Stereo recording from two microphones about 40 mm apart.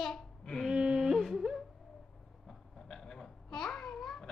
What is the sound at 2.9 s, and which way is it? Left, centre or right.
Babbling, centre.